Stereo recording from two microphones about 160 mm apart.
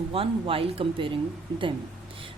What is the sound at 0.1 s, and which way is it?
A woman's voice, 35° right (ahead or behind).